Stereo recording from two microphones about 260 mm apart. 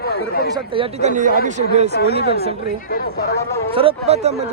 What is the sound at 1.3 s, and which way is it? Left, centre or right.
Speech, left.